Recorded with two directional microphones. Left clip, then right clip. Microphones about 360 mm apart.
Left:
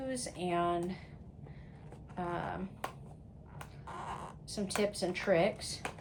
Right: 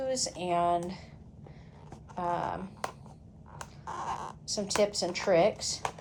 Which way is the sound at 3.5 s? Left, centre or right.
Centre.